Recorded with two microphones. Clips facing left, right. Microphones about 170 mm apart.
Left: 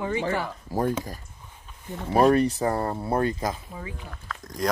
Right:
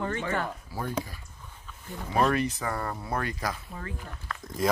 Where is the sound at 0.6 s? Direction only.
45° left (ahead or behind).